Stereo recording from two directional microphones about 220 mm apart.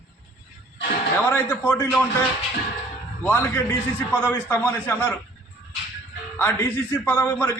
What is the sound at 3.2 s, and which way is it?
A man's voice, 10° left (ahead or behind).